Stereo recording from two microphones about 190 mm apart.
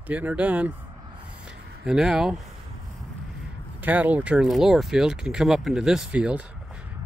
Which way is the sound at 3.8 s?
10° right (ahead or behind).